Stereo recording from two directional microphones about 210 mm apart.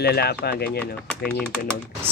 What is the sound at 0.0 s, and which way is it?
Speech, 50° left (ahead or behind).